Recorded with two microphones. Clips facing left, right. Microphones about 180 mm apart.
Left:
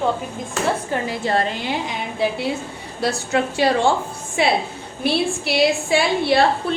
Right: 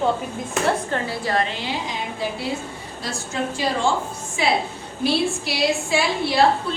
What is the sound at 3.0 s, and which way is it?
A woman's voice, 65° left (ahead or behind).